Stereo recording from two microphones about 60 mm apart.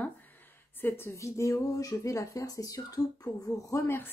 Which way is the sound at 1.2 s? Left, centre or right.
Left.